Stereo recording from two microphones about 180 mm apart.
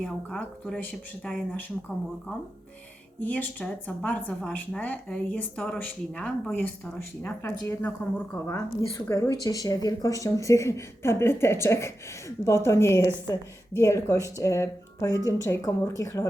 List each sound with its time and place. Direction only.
0.0 s speech: 5° left (ahead or behind)
3.2 s speech: 10° left (ahead or behind)